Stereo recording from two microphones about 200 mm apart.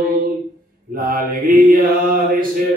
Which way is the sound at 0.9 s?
45° right (ahead or behind).